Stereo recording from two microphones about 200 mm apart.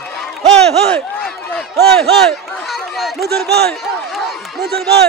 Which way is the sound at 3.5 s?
50° right (ahead or behind).